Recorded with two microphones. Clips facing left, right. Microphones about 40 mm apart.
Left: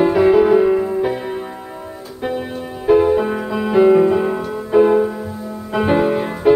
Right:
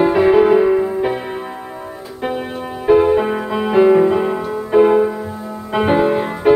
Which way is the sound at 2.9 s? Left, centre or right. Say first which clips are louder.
Right 1 dB; right.